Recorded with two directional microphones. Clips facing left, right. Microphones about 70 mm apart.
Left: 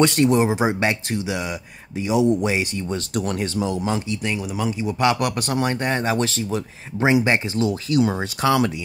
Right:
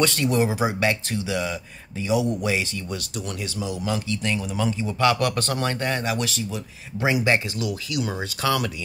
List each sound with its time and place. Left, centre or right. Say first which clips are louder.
0.0 s speech: left 5 dB; left
3.2 s a man's voice: left 9 dB; left
4.1 s speech: left 1 dB; centre; by 6.6 s left
7.0 s speech: left 3 dB; left